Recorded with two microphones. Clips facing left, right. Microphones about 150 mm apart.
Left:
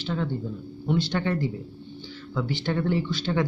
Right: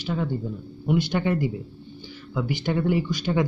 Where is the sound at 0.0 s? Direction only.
10° right (ahead or behind).